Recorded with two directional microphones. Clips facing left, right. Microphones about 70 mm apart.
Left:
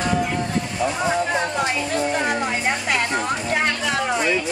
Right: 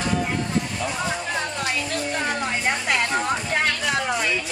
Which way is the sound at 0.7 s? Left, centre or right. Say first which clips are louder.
Left 5 dB; centre.